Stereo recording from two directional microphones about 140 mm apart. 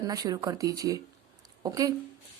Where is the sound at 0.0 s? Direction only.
25° right (ahead or behind).